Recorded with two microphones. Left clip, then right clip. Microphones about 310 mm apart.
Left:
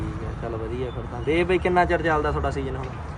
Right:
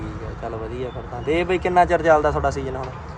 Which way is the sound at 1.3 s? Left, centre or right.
Centre.